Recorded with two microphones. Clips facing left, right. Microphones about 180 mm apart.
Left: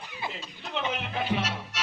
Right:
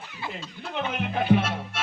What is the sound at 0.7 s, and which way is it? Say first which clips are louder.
A man's voice: right 2 dB; 50° right (ahead or behind).